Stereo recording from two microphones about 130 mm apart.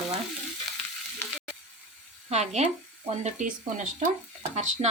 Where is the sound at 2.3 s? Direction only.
60° right (ahead or behind).